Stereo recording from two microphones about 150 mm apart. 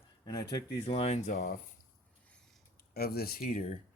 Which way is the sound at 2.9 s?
90° left.